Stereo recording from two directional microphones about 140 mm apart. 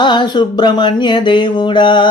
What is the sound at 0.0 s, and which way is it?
Speech, 35° left (ahead or behind).